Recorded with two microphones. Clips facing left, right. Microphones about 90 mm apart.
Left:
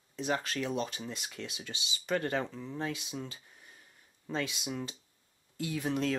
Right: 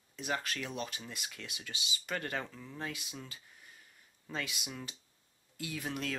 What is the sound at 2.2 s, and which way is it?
Speech, 20° left (ahead or behind).